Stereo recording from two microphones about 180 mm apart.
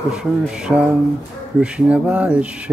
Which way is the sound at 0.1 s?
5° right (ahead or behind).